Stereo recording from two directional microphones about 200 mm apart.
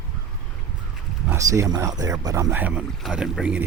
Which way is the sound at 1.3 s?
15° right (ahead or behind).